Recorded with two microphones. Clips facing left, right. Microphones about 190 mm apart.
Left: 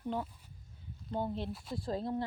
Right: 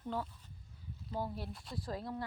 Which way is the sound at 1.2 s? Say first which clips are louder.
Left 7 dB; 25° left (ahead or behind).